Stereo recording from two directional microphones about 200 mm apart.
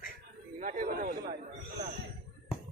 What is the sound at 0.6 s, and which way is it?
Speech, 40° right (ahead or behind).